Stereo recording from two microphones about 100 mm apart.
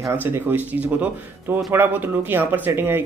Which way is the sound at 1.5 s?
20° right (ahead or behind).